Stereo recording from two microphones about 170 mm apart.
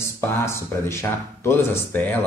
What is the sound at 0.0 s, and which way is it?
Speech, 15° left (ahead or behind).